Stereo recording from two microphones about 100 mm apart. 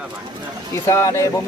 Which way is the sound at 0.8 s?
30° left (ahead or behind).